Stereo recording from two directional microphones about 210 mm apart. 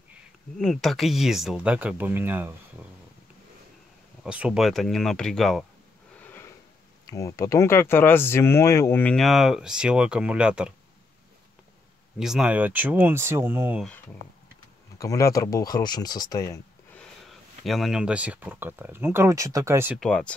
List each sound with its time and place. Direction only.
0.6 s speech: centre (ahead or behind)
4.2 s speech: 5° right (ahead or behind)
7.1 s speech: 15° left (ahead or behind); by 10.7 s 5° right (ahead or behind)
12.2 s speech: 5° right (ahead or behind)
15.0 s speech: 15° left (ahead or behind)
17.3 s speech: centre (ahead or behind)
20.0 s speech: 5° left (ahead or behind)